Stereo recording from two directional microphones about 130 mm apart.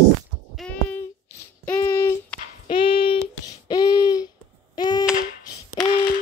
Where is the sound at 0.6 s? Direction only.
10° left (ahead or behind).